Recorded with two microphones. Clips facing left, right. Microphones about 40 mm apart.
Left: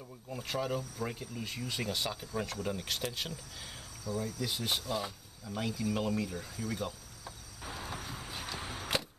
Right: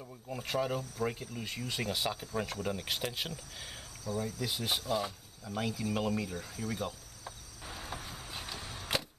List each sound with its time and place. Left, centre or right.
0.3 s speech: centre
7.6 s vehicle: centre
8.5 s a sound: centre